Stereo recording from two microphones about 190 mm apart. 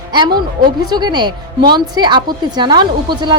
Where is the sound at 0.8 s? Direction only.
20° right (ahead or behind).